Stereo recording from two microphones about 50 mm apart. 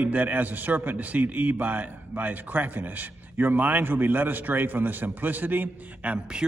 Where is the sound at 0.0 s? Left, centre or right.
Right.